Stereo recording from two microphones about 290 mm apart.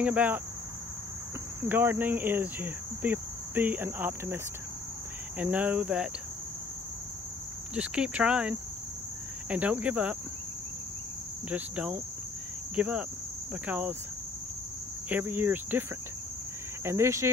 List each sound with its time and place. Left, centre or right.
0.0 s cricket: centre
1.7 s speech: centre
5.4 s cricket: centre
7.7 s cricket: centre
11.5 s cricket: centre
15.0 s speech: centre
16.8 s speech: centre